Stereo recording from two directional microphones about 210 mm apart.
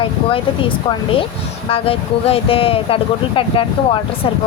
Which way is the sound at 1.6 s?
25° left (ahead or behind).